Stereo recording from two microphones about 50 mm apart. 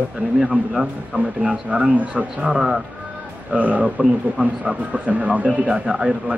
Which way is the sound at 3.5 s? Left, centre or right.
Right.